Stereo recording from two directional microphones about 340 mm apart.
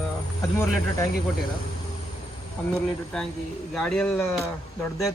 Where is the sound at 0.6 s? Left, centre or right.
Centre.